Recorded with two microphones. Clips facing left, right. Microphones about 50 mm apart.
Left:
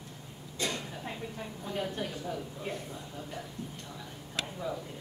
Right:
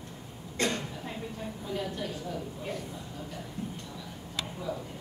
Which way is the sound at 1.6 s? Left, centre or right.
Left.